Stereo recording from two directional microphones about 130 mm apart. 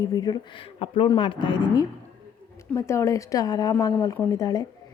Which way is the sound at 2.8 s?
20° left (ahead or behind).